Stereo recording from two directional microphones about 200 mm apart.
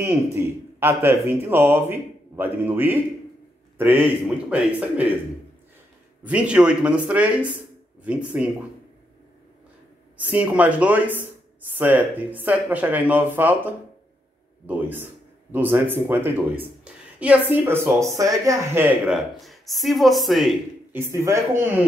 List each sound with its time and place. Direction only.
0.0 s speech: 10° right (ahead or behind)
6.2 s speech: 5° right (ahead or behind)
10.1 s speech: 10° right (ahead or behind)
14.7 s speech: 10° right (ahead or behind)
21.0 s speech: 15° right (ahead or behind)